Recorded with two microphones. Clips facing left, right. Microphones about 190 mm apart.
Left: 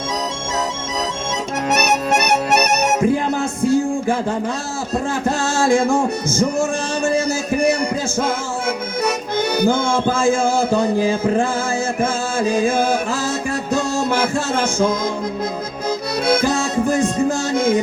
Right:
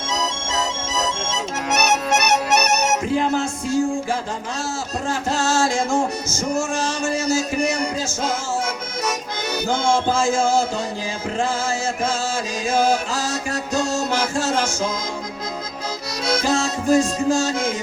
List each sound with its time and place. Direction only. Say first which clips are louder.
2.1 s music: left 2 dB; 55° left (ahead or behind)
5.2 s music: even; 55° left (ahead or behind)
9.0 s music: left 6 dB; 55° left (ahead or behind)
16.2 s music: left 2 dB; 55° left (ahead or behind)